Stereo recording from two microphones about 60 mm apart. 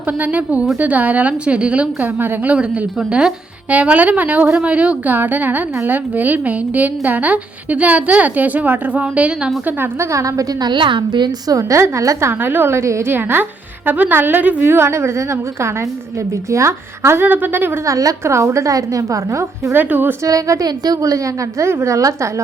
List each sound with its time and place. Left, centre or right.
0.2 s a woman's voice: right
2.1 s a woman's voice: right
3.1 s a woman's voice: centre
5.1 s a woman's voice: right
10.0 s a woman's voice: right
11.4 s a woman's voice: right
12.3 s a woman's voice: right
17.2 s a woman's voice: right
17.8 s a woman's voice: right
19.7 s a woman's voice: right
20.2 s a woman's voice: right
21.6 s a woman's voice: right
21.9 s a woman's voice: right